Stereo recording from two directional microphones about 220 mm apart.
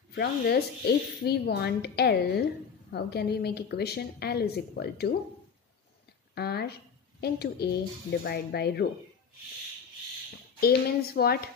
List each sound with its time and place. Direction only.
0.1 s speech: 45° left (ahead or behind)
6.3 s speech: 45° left (ahead or behind)
10.6 s speech: 45° left (ahead or behind)